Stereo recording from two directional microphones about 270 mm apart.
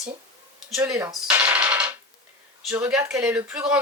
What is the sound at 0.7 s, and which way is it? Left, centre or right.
Speech, centre.